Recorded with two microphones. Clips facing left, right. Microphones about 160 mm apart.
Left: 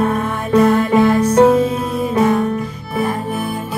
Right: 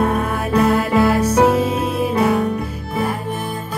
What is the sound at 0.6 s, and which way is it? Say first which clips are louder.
Music: left 2 dB; 10° right (ahead or behind).